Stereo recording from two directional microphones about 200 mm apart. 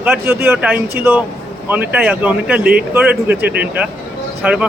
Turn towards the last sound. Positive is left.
turn(degrees=-5)  # may be behind; listen again after turning